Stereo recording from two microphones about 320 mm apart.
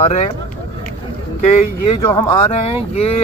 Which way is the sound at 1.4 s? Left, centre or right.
Left.